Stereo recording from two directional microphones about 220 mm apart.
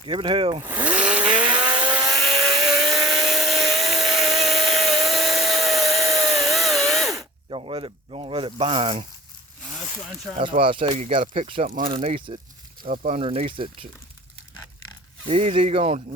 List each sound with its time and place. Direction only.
0.0 s speech: 25° right (ahead or behind)
0.7 s chainsaw: 5° right (ahead or behind)
1.5 s vehicle: 5° right (ahead or behind)
7.5 s speech: 25° right (ahead or behind)
10.3 s speech: 25° right (ahead or behind)
12.8 s speech: 35° right (ahead or behind)
15.3 s speech: 30° right (ahead or behind)